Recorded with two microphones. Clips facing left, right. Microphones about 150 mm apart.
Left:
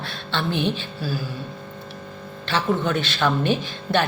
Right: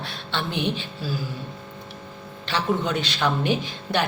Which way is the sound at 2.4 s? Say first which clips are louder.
Left 2 dB; 15° right (ahead or behind).